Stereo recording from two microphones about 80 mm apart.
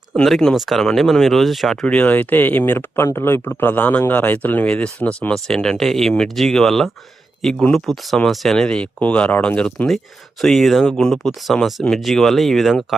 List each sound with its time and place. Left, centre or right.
0.2 s speech: centre
2.0 s speech: left; by 13.0 s centre